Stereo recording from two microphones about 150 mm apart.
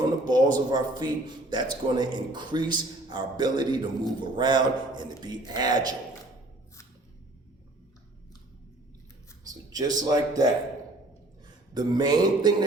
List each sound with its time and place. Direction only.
0.0 s a man's voice: 30° right (ahead or behind)
9.5 s a sound: 25° right (ahead or behind)
10.0 s a man's voice: 25° right (ahead or behind)
11.7 s a man's voice: 30° right (ahead or behind)